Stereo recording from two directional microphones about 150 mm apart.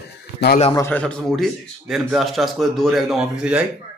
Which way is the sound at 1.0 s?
5° left (ahead or behind).